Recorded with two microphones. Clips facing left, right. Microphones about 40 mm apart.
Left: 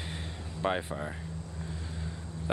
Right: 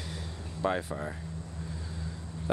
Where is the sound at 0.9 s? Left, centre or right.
Centre.